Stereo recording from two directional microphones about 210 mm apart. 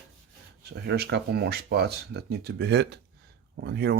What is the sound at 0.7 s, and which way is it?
Speech, 50° right (ahead or behind).